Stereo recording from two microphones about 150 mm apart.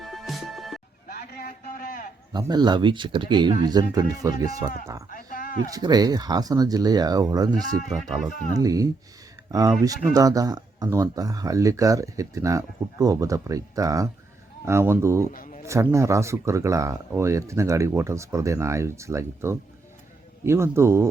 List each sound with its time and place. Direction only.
0.0 s music: centre (ahead or behind)
1.0 s a sound: 90° left; by 2.0 s 70° left (ahead or behind)
2.3 s speech: 25° right (ahead or behind)
5.1 s a sound: 65° left (ahead or behind)
5.7 s speech: 25° right (ahead or behind)
7.9 s speech: centre (ahead or behind)
8.3 s speech: 60° left (ahead or behind)
8.5 s speech: 25° right (ahead or behind)
15.3 s a sound: 65° left (ahead or behind)
15.6 s a man's voice: 20° right (ahead or behind)